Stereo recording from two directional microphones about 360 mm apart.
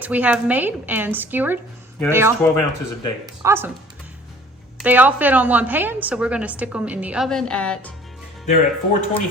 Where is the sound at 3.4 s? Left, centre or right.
Centre.